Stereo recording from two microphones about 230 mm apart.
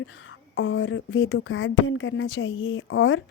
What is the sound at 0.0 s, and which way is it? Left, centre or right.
Speech, left.